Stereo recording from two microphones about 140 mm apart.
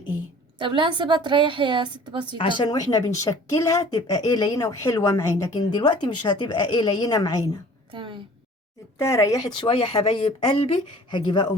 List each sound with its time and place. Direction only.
0.6 s a woman's voice: 35° right (ahead or behind)
2.4 s speech: 35° left (ahead or behind)
7.9 s a sound: 35° right (ahead or behind)
9.0 s speech: 20° left (ahead or behind)
9.6 s speech: 45° left (ahead or behind)